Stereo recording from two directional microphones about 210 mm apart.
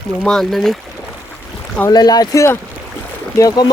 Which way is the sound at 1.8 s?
15° left (ahead or behind).